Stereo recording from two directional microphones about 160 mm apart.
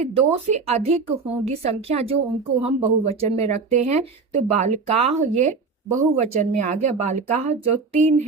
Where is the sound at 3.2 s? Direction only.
40° right (ahead or behind).